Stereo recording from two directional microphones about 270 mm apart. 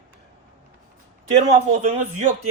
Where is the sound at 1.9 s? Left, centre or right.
Right.